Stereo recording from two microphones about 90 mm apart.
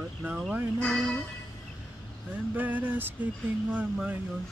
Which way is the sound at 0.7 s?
10° left (ahead or behind).